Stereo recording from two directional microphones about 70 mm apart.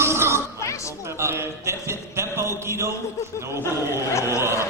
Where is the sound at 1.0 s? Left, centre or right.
Right.